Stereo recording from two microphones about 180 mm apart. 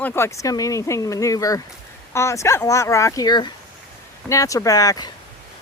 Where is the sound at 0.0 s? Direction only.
15° left (ahead or behind).